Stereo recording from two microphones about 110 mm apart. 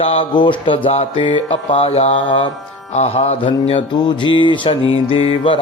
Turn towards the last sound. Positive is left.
turn(degrees=55)  # may be behind; listen again after turning